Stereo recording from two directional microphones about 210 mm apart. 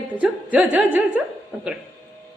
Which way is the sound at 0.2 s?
5° right (ahead or behind).